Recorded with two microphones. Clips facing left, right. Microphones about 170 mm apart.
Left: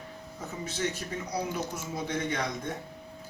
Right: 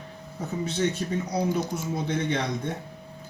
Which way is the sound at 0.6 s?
30° right (ahead or behind).